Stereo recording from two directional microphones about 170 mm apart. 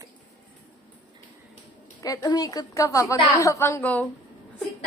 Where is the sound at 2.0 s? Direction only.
20° left (ahead or behind).